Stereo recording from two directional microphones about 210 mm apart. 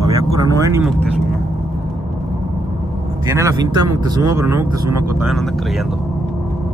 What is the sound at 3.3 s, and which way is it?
Speech, 15° right (ahead or behind).